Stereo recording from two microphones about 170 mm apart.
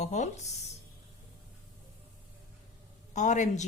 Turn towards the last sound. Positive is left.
turn(degrees=45)  # may be behind; listen again after turning